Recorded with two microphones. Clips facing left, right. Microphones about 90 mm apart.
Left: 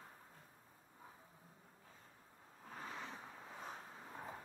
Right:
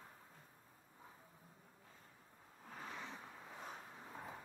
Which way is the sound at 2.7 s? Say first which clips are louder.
Left 1 dB; centre (ahead or behind).